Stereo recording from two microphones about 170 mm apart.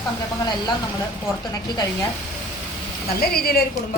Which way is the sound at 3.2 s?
65° left (ahead or behind).